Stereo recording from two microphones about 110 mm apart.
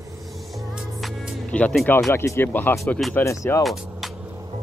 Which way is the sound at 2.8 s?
5° left (ahead or behind).